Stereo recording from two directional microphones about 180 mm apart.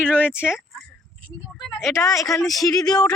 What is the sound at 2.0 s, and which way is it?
Speech, 20° left (ahead or behind).